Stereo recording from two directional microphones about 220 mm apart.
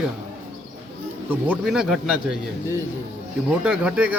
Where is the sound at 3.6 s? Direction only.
5° right (ahead or behind).